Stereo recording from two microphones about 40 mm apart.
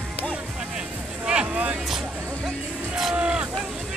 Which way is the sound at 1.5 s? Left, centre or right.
Right.